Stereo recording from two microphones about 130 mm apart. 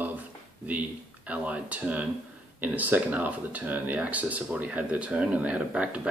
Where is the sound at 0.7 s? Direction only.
10° right (ahead or behind).